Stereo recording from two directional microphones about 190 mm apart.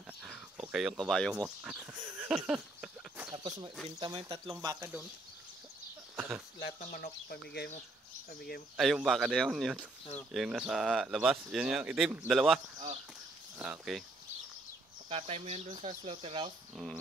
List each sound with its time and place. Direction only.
0.2 s a sound: 5° right (ahead or behind)
1.4 s speech: 5° right (ahead or behind)
2.1 s a sound: 10° right (ahead or behind)
3.3 s speech: 25° right (ahead or behind)
6.1 s a sound: 5° right (ahead or behind)
6.9 s speech: 40° left (ahead or behind)
8.3 s speech: 55° left (ahead or behind)
8.7 s speech: centre (ahead or behind)
15.0 s speech: 30° right (ahead or behind)